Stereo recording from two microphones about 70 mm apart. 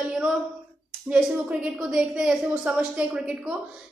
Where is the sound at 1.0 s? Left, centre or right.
Centre.